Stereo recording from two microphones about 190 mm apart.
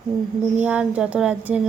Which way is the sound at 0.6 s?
5° right (ahead or behind).